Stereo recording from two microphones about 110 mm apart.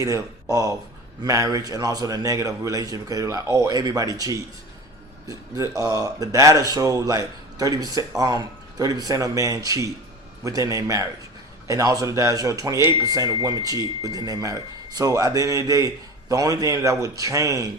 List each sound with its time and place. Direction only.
0.0 s a man's voice: 30° right (ahead or behind)